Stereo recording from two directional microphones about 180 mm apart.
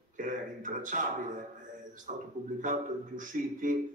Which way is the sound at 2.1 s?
45° right (ahead or behind).